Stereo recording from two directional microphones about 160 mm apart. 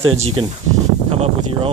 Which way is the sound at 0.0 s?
35° right (ahead or behind).